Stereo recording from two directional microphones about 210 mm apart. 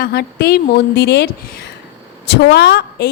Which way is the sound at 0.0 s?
50° left (ahead or behind).